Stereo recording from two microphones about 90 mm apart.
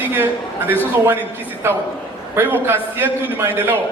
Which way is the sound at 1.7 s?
25° right (ahead or behind).